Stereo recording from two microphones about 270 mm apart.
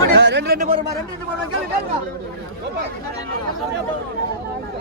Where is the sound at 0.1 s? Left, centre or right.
Right.